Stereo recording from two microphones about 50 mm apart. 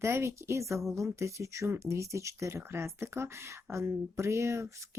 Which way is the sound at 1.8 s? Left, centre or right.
Right.